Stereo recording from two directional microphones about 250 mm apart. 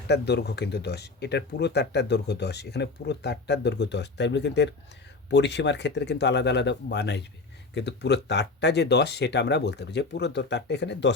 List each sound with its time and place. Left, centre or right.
0.1 s speech: left